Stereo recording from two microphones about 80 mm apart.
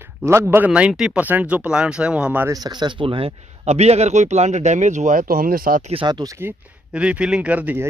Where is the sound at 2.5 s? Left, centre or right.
Right.